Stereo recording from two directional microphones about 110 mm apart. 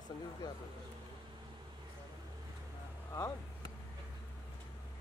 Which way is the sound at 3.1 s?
30° left (ahead or behind).